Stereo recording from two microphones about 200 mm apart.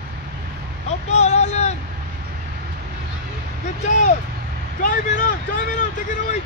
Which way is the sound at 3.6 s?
35° left (ahead or behind).